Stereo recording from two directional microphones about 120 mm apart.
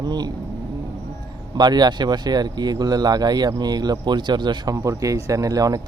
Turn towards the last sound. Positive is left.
turn(degrees=-30)  # may be behind; listen again after turning